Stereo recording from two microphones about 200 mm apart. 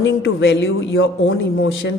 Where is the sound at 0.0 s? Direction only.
65° left (ahead or behind).